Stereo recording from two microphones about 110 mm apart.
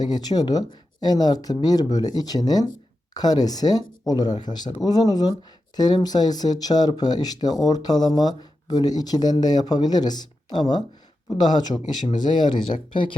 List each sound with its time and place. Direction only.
0.0 s speech: 40° left (ahead or behind)